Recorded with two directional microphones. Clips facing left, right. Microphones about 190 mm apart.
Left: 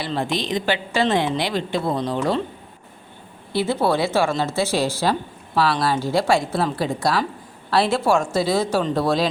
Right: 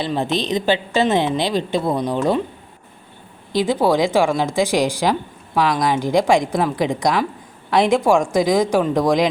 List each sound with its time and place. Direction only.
0.0 s a woman's voice: 20° right (ahead or behind)
3.5 s a woman's voice: 15° right (ahead or behind)